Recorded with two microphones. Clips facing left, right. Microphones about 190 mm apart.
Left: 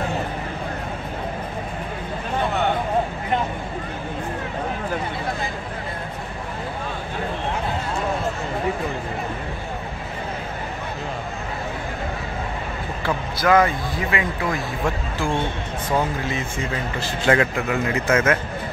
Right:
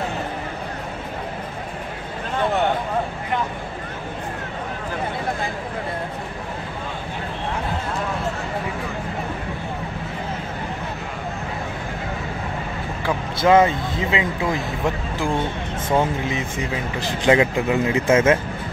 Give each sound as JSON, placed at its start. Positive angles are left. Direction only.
{"t": 13.4, "sound": "speech", "side_deg": -25}
{"t": 15.9, "sound": "speech", "side_deg": -20}